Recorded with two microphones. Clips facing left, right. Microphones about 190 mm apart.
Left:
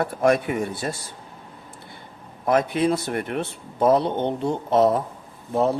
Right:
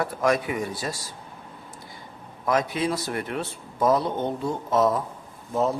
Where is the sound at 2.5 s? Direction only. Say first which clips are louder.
Left 4 dB; 55° left (ahead or behind).